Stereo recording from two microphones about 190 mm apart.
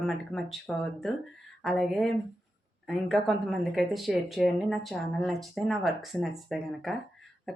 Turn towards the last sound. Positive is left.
turn(degrees=0)  # may be behind; listen again after turning